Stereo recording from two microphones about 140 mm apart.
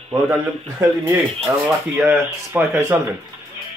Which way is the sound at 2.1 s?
15° right (ahead or behind).